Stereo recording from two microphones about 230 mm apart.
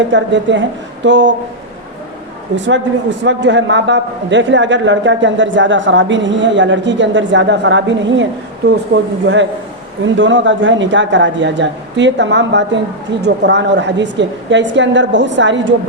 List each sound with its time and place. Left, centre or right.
0.1 s a man's voice: right
2.6 s a man's voice: right